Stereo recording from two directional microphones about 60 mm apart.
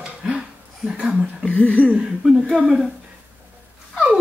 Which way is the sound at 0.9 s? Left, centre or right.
Centre.